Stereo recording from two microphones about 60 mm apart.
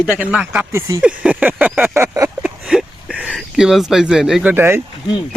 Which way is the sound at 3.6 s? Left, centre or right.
Centre.